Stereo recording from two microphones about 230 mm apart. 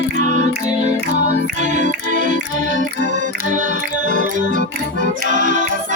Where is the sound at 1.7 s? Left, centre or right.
Right.